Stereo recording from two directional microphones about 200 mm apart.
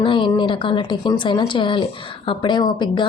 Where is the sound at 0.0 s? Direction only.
25° left (ahead or behind).